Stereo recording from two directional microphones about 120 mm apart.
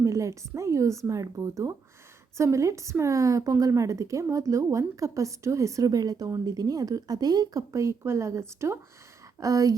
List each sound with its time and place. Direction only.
0.0 s a woman's voice: 25° right (ahead or behind)